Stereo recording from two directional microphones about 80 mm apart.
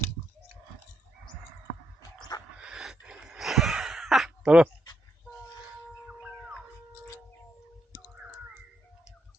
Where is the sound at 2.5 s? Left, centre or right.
Centre.